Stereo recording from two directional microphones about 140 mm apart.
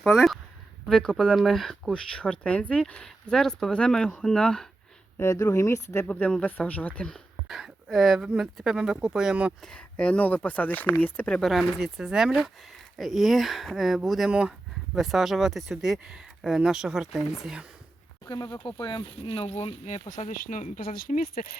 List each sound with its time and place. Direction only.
0.0 s speech: centre (ahead or behind)
5.1 s speech: 20° left (ahead or behind)
6.1 s speech: 10° left (ahead or behind)
9.6 s speech: 10° left (ahead or behind)
18.3 s speech: 30° left (ahead or behind); by 21.4 s 70° left (ahead or behind)